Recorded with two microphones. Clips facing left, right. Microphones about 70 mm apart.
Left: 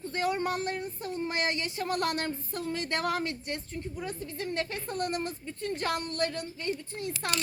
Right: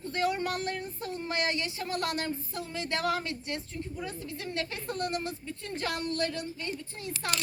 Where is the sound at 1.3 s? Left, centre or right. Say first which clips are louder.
Right 3 dB; left.